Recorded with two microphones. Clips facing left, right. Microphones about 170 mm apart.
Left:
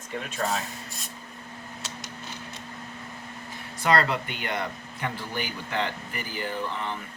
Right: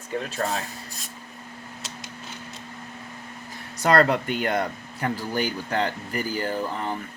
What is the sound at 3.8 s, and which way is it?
Speech, 45° right (ahead or behind).